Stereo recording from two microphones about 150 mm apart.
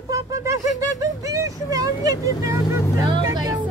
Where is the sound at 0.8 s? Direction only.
25° right (ahead or behind).